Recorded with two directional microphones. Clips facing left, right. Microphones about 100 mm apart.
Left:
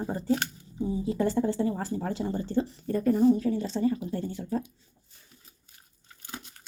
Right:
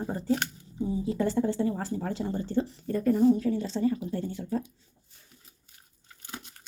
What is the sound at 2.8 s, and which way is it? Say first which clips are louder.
Speech: left 1 dB; 20° left (ahead or behind).